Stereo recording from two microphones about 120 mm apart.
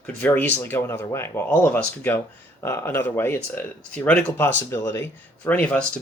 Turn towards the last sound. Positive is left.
turn(degrees=10)  # may be behind; listen again after turning